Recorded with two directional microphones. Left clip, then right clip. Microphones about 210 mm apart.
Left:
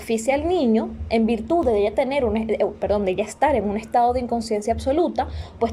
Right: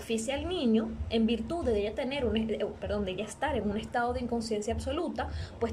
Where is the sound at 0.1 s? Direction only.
25° left (ahead or behind).